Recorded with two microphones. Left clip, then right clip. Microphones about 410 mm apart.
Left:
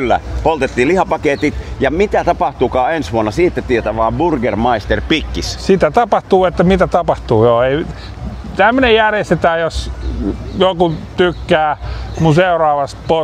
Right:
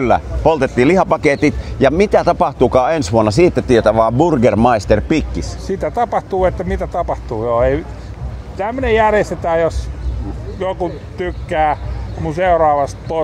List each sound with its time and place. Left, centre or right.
0.0 s speech: right
5.0 s speech: centre
5.7 s speech: left